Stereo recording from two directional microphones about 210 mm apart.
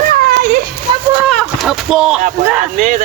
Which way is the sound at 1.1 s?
Centre (ahead or behind).